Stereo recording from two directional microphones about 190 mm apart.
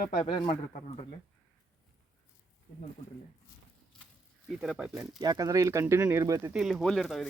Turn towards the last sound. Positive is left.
turn(degrees=0)  # may be behind; listen again after turning